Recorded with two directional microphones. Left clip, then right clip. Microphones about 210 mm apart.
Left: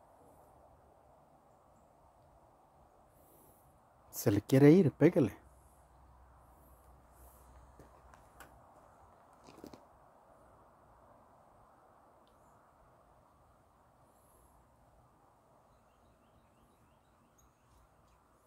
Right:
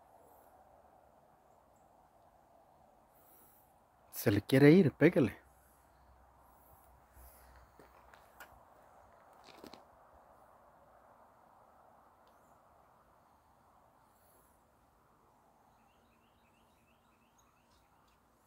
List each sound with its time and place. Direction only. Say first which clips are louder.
4.1 s speech: even; 5° left (ahead or behind)
9.5 s biting: left 1 dB; 15° left (ahead or behind)